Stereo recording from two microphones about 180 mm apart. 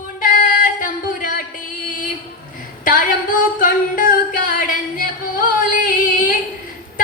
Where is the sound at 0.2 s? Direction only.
50° left (ahead or behind).